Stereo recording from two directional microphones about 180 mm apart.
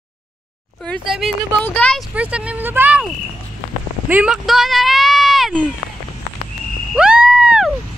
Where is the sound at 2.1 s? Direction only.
5° right (ahead or behind).